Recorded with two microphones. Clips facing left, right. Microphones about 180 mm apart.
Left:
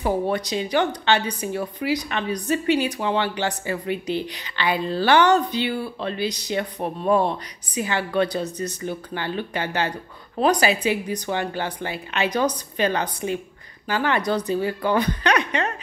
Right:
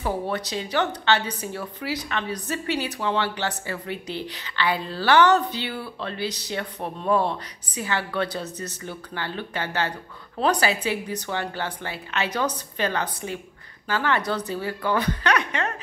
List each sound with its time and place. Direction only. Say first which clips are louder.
0.0 s a woman's voice: left 4 dB; 15° left (ahead or behind)